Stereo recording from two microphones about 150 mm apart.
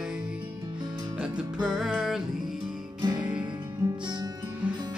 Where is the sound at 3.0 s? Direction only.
30° right (ahead or behind).